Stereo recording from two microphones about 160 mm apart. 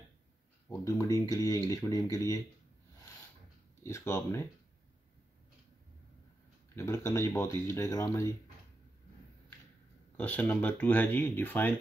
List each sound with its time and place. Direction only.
0.7 s speech: 20° left (ahead or behind)
3.8 s speech: 15° left (ahead or behind)
6.7 s speech: 15° left (ahead or behind)
10.1 s speech: 10° left (ahead or behind)